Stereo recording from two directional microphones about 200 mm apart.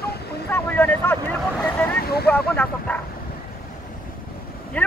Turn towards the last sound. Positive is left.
turn(degrees=5)  # may be behind; listen again after turning